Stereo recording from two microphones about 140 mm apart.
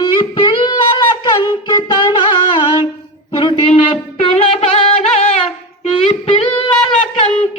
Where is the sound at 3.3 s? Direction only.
35° left (ahead or behind).